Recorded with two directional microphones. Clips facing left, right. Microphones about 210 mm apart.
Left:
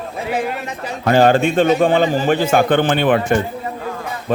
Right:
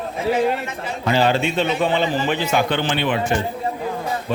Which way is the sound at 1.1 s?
50° left (ahead or behind).